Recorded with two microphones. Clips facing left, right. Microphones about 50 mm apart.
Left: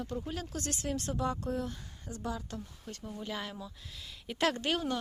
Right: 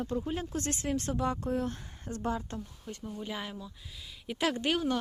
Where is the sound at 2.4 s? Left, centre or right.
Right.